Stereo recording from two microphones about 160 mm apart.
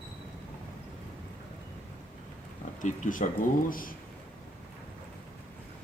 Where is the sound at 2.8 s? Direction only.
55° left (ahead or behind).